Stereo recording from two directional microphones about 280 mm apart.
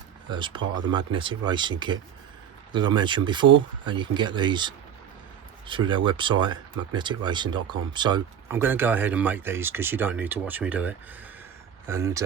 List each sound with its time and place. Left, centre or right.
0.3 s speech: centre